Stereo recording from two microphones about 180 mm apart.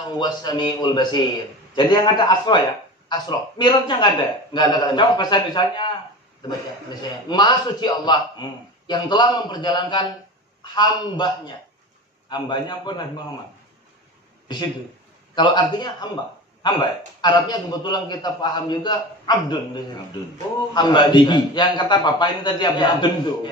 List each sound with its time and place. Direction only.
0.1 s a man's voice: 25° left (ahead or behind)
6.9 s a man's voice: 25° left (ahead or behind)
15.3 s a man's voice: 25° left (ahead or behind)